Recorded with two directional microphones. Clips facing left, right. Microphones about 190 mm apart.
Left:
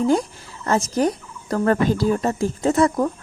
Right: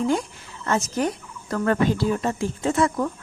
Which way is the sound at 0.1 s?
35° left (ahead or behind).